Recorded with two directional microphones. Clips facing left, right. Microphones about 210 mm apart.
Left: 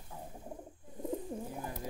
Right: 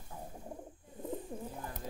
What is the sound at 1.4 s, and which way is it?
Bird, 10° left (ahead or behind).